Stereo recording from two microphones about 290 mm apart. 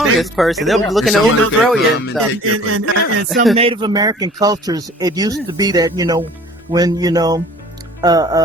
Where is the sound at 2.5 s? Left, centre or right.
Right.